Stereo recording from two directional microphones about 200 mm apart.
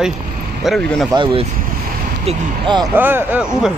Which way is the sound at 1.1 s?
25° right (ahead or behind).